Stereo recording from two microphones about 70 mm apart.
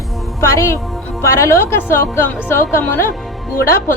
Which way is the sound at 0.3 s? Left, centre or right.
Left.